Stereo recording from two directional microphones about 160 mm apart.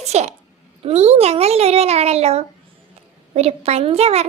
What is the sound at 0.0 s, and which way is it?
A woman's voice, 45° right (ahead or behind).